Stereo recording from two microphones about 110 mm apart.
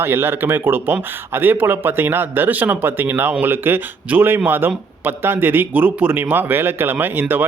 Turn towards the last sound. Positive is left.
turn(degrees=-20)  # may be behind; listen again after turning